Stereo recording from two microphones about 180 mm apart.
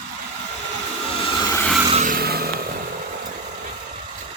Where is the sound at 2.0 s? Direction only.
55° right (ahead or behind).